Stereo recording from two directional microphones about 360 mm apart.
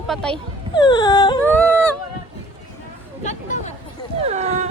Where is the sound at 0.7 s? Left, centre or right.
Centre.